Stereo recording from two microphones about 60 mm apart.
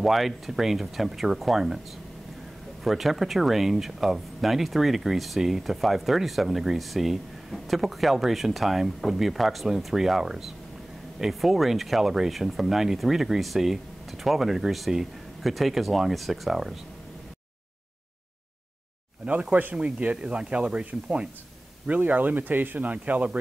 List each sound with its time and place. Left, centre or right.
0.0 s speech: centre
2.8 s speech: centre
19.5 s speech: right